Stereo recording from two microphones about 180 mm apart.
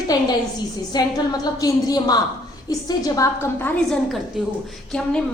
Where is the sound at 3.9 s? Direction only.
Centre (ahead or behind).